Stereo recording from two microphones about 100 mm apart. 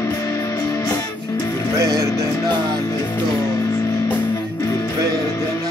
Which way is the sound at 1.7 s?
35° right (ahead or behind).